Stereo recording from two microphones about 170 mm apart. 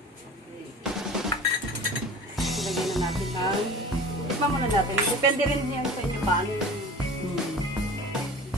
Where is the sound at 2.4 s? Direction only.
Centre (ahead or behind).